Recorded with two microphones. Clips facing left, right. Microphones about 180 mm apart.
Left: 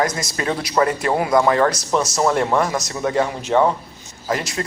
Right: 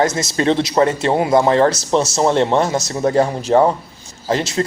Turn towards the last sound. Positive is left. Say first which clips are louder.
# right 5 dB
turn(degrees=-30)  # may be behind; listen again after turning